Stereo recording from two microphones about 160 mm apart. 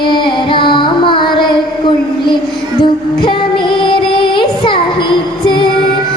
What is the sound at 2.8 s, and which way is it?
Music, 30° left (ahead or behind).